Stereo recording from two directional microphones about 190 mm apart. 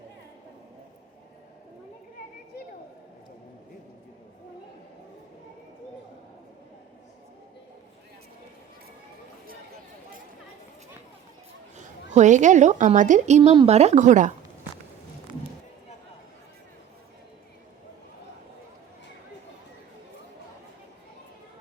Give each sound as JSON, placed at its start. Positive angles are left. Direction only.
{"t": 12.1, "sound": "a woman's voice", "side_deg": -40}